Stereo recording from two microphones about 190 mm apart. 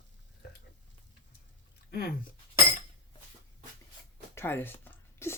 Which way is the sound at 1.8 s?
55° left (ahead or behind).